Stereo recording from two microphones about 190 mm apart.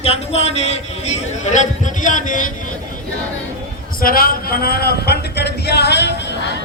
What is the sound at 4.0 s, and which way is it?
Speech, 50° left (ahead or behind).